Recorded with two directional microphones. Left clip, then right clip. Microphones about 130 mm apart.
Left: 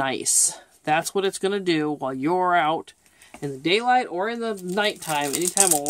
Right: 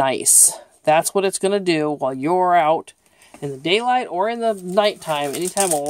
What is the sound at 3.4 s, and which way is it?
Speech, 45° right (ahead or behind).